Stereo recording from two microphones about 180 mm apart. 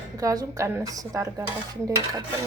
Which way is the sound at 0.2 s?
20° right (ahead or behind).